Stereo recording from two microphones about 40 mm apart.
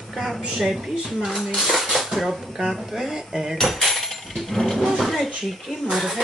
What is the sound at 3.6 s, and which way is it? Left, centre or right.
Speech, centre.